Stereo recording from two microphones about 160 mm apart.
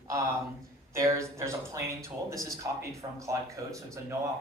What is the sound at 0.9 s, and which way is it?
Speech, 20° right (ahead or behind).